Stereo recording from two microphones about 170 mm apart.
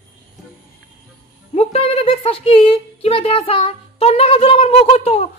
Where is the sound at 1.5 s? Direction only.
35° left (ahead or behind).